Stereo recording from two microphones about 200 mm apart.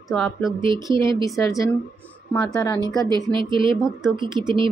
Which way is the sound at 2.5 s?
15° left (ahead or behind).